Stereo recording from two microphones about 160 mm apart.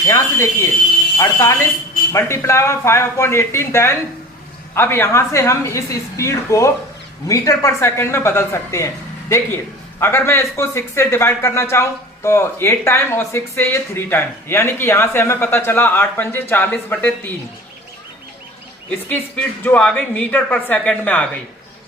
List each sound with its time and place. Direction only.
0.1 s a sound: 15° left (ahead or behind)
1.2 s speech: 15° left (ahead or behind)
10.0 s speech: 15° left (ahead or behind)
18.9 s speech: 10° left (ahead or behind)